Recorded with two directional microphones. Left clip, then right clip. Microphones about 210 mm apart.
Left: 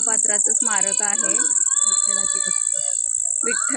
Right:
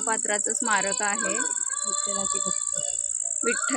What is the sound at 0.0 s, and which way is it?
Speech, centre (ahead or behind).